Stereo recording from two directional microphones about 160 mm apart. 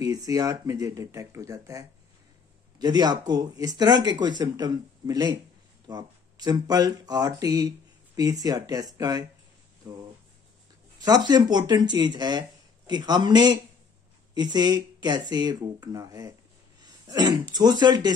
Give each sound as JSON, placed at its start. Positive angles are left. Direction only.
{"t": 0.0, "sound": "speech", "side_deg": -20}